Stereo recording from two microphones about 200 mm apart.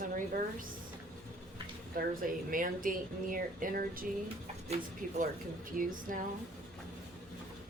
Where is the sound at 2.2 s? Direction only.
45° right (ahead or behind).